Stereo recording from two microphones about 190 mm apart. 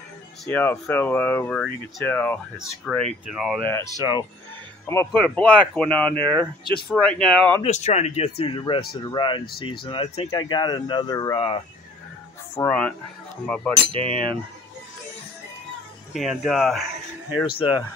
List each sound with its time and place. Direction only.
0.5 s speech: 10° left (ahead or behind)
3.6 s speech: 15° left (ahead or behind)
4.8 s speech: 10° left (ahead or behind)
7.6 s speech: 35° left (ahead or behind)
12.5 s speech: 5° left (ahead or behind)
16.1 s speech: centre (ahead or behind)
17.6 s speech: 25° left (ahead or behind)